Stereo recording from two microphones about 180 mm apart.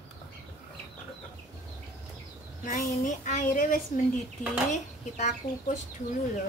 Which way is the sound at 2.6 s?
45° left (ahead or behind).